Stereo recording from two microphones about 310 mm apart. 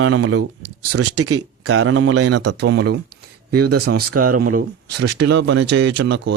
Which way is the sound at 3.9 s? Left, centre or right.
Right.